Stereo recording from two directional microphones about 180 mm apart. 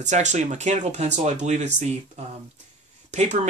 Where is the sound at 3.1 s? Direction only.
40° right (ahead or behind).